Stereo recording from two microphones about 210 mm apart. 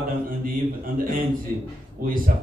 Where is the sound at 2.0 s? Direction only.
45° right (ahead or behind).